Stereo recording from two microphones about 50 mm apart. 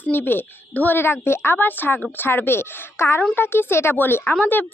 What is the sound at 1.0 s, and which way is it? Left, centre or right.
A woman's voice, left.